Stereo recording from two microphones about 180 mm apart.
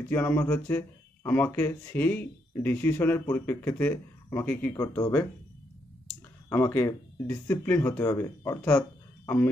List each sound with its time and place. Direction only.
0.1 s speech: 10° left (ahead or behind)
6.5 s speech: 15° left (ahead or behind)